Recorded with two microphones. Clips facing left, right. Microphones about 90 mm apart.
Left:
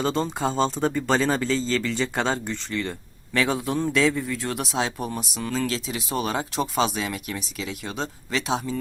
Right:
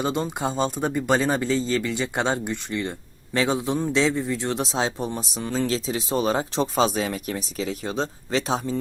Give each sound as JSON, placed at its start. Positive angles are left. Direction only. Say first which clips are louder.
{"t": 0.0, "sound": "a man's voice", "louder": "left 1 dB", "side_deg": -15}